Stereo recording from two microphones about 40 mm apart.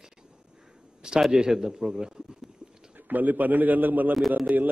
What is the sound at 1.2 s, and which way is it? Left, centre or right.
A man's voice, centre.